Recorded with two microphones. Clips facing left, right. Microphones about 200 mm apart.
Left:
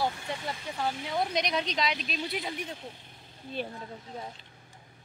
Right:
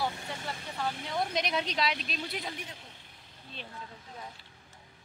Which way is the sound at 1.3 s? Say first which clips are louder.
Left 2 dB; 5° right (ahead or behind).